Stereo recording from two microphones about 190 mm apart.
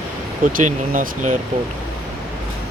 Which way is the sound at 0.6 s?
45° right (ahead or behind).